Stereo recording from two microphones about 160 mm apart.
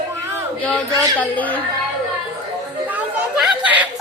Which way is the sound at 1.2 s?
10° left (ahead or behind).